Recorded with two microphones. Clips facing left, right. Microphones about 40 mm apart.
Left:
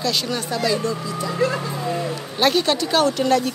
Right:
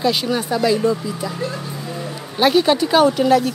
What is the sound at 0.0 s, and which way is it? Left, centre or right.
Speech, centre.